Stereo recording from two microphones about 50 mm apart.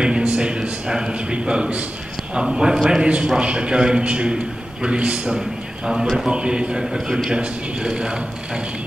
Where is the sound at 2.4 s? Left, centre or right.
Centre.